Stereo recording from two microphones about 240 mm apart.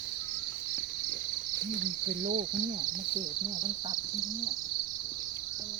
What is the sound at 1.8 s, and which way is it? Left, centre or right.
Cricket, right.